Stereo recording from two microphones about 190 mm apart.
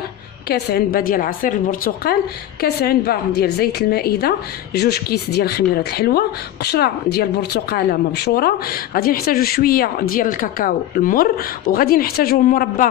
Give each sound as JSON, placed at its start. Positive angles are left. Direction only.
{"t": 0.5, "sound": "a woman's voice", "side_deg": 55}